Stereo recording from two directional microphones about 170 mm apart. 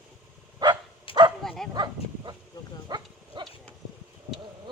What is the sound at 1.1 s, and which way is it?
Bow-wow, 30° left (ahead or behind).